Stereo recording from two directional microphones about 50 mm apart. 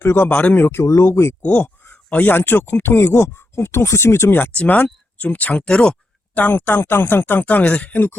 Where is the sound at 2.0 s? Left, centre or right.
Left.